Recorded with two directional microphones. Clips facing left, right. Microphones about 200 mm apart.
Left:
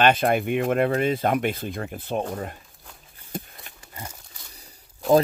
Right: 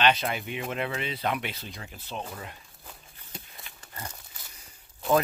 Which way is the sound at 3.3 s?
50° left (ahead or behind).